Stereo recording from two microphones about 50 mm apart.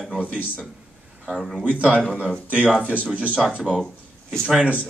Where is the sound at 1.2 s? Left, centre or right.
Centre.